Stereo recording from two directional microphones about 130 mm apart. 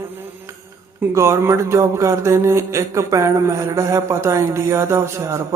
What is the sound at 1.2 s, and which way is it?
Speech, 20° right (ahead or behind).